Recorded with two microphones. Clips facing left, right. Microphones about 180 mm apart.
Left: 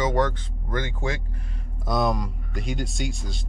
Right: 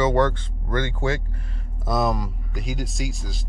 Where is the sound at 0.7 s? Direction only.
10° left (ahead or behind).